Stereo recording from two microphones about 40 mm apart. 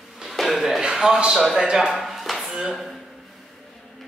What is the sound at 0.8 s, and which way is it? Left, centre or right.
A man's voice, centre.